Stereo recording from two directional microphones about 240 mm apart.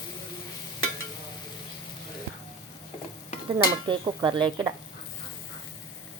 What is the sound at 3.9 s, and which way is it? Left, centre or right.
Speech, centre.